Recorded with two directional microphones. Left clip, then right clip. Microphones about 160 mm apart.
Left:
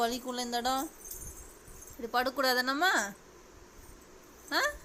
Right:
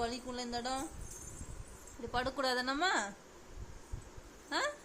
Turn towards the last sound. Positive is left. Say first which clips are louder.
# left 5 dB
turn(degrees=15)  # may be behind; listen again after turning